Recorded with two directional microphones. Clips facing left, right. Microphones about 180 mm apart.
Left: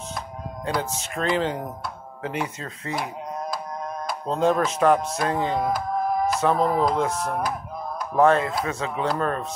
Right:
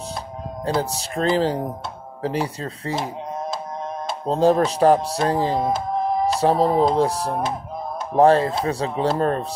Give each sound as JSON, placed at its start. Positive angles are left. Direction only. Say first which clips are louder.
{"t": 0.7, "sound": "speech", "louder": "right 4 dB", "side_deg": -30}